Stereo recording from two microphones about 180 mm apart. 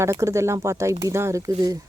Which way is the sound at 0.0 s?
15° right (ahead or behind).